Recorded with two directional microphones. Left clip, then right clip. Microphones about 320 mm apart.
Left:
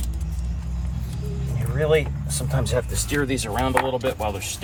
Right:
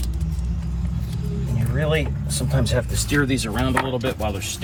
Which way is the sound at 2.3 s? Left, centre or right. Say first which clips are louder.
Right 1 dB; centre.